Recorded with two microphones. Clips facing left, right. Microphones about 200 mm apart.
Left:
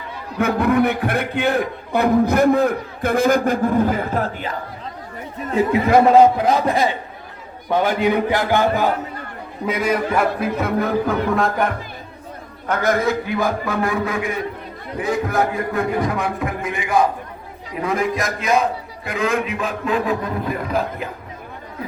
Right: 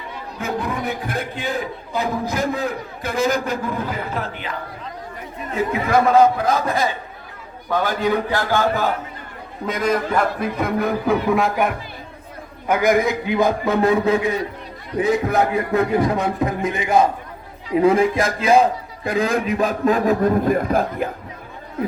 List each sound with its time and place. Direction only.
0.3 s a man's voice: 60° left (ahead or behind); by 4.5 s 45° left (ahead or behind)
5.5 s a man's voice: 30° left (ahead or behind); by 21.1 s 50° right (ahead or behind)